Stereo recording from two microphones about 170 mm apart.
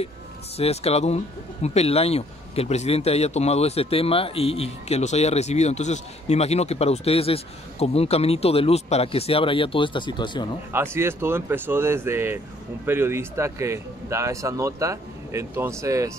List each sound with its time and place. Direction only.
0.6 s speech: 35° left (ahead or behind)
10.7 s speech: 15° right (ahead or behind)